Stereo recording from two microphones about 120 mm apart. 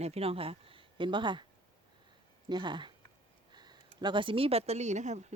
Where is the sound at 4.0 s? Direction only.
45° right (ahead or behind); by 5.3 s 75° right (ahead or behind).